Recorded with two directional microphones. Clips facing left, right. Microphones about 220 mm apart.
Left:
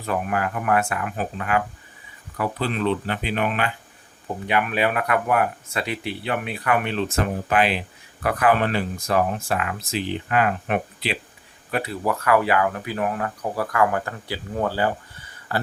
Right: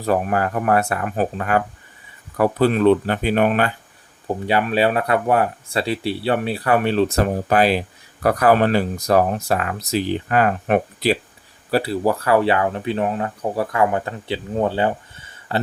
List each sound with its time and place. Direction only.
0.0 s speech: 40° right (ahead or behind)
4.4 s speech: 30° right (ahead or behind)